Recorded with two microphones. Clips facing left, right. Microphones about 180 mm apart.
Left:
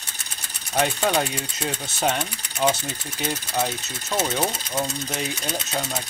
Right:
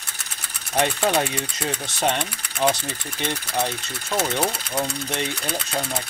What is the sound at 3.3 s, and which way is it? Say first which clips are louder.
Speech: even; 5° left (ahead or behind).